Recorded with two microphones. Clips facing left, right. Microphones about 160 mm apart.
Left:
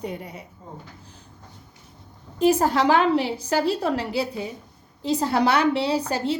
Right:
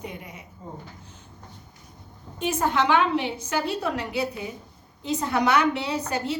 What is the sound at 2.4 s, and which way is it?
A woman's voice, 35° left (ahead or behind).